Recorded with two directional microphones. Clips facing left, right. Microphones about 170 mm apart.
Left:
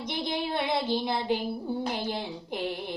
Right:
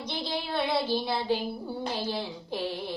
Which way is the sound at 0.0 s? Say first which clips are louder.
Left 2 dB; 20° left (ahead or behind).